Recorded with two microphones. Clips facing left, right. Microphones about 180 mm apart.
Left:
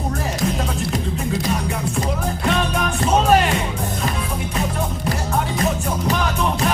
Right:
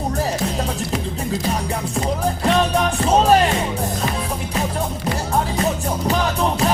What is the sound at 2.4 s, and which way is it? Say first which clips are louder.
Music: right 4 dB; 35° right (ahead or behind).